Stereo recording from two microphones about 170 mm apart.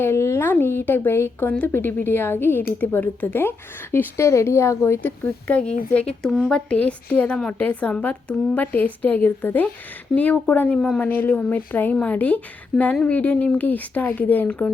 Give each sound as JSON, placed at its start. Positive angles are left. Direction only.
{"t": 0.0, "sound": "a woman's voice", "side_deg": 15}